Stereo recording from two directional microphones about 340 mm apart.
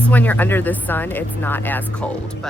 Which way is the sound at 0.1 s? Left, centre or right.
Centre.